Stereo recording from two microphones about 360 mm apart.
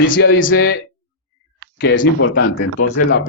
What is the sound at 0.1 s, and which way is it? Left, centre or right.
Speech, left.